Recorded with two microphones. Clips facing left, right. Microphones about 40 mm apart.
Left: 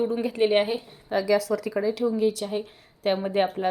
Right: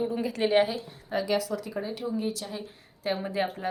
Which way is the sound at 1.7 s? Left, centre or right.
Left.